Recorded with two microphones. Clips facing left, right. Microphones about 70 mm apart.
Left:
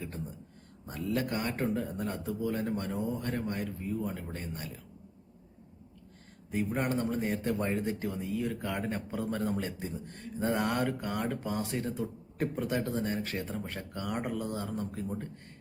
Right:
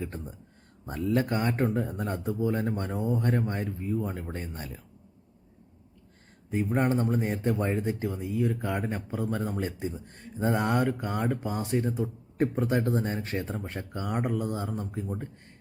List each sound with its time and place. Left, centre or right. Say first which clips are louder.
0.9 s speech: right 5 dB; right
6.5 s speech: right 5 dB; right; by 9.6 s centre
9.6 s speech: right 4 dB; right
15.0 s speech: right 1 dB; centre